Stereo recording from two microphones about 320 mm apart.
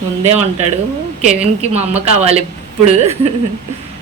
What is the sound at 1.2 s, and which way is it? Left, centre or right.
A woman's voice, right.